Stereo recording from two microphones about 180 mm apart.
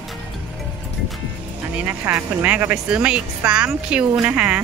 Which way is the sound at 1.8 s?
10° right (ahead or behind).